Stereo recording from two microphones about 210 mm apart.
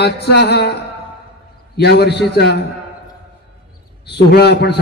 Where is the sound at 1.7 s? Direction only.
50° left (ahead or behind).